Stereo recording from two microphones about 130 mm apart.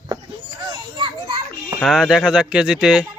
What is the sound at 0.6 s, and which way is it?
A child's voice, 35° right (ahead or behind).